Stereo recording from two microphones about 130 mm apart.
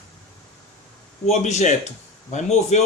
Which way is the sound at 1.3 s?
60° left (ahead or behind).